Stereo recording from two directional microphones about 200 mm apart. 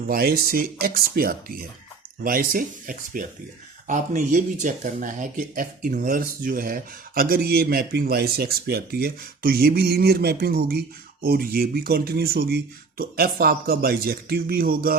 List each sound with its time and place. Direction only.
0.1 s speech: 50° right (ahead or behind)